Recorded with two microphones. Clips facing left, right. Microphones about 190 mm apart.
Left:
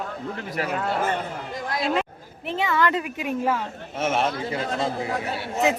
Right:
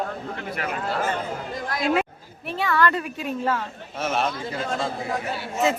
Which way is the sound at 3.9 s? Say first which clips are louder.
Left 2 dB; 25° left (ahead or behind).